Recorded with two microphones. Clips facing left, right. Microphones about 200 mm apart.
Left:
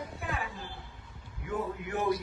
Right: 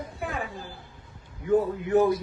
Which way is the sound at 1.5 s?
35° right (ahead or behind).